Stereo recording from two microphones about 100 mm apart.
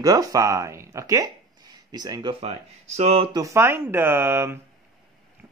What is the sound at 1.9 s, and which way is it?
Speech, 45° right (ahead or behind).